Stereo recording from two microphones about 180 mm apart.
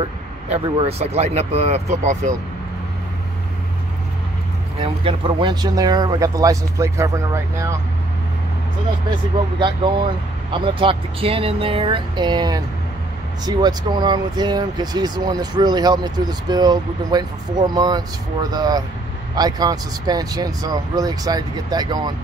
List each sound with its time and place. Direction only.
0.0 s speech: 30° right (ahead or behind)
4.8 s speech: 30° right (ahead or behind)
9.6 s speech: 25° right (ahead or behind)